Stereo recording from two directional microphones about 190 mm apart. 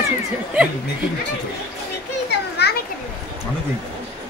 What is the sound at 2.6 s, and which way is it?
Children playing, 60° left (ahead or behind).